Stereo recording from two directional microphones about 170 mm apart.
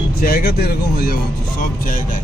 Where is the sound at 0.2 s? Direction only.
60° left (ahead or behind).